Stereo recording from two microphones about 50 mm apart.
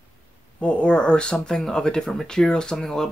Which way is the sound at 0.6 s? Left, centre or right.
Left.